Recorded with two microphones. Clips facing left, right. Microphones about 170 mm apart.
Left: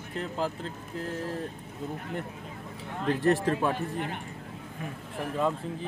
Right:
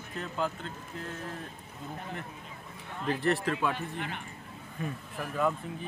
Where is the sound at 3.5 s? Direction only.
40° left (ahead or behind).